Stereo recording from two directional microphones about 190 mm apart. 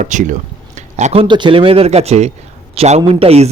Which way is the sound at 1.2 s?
25° right (ahead or behind).